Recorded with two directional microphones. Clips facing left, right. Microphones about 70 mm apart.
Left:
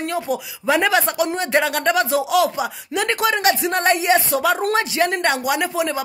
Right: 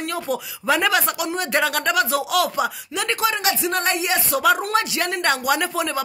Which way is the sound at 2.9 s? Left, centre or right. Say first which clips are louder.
Left 5 dB; left.